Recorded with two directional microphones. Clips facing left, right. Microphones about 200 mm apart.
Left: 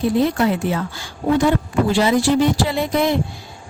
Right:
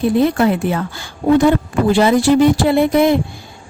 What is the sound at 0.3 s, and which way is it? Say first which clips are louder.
A woman's voice: right 3 dB; 55° right (ahead or behind).